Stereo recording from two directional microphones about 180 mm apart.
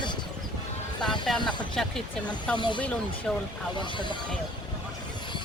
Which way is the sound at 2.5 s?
25° left (ahead or behind).